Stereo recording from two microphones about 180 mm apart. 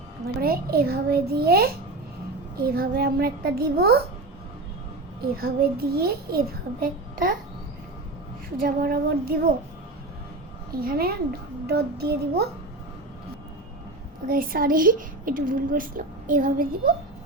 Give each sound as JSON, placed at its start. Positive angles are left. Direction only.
{"t": 0.4, "sound": "a child's voice", "side_deg": -55}
{"t": 2.7, "sound": "a child's voice", "side_deg": -60}
{"t": 5.2, "sound": "a child's voice", "side_deg": -55}
{"t": 8.6, "sound": "a child's voice", "side_deg": -55}
{"t": 10.8, "sound": "a child's voice", "side_deg": -55}
{"t": 14.3, "sound": "a woman's voice", "side_deg": -55}